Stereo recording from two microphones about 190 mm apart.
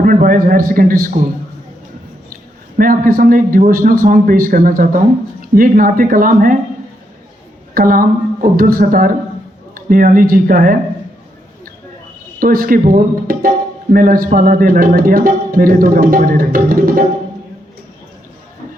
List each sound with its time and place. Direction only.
0.0 s a man's voice: 45° right (ahead or behind)
2.3 s a man's voice: 45° right (ahead or behind)
7.7 s a man's voice: 50° right (ahead or behind)
12.4 s a man's voice: 50° right (ahead or behind)